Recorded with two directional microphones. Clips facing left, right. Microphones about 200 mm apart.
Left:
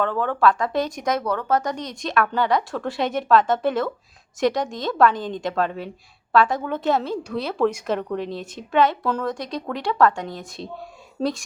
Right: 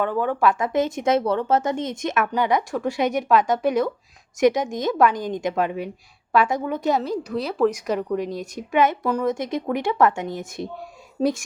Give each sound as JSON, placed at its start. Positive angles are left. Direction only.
{"t": 0.0, "sound": "a woman's voice", "side_deg": -10}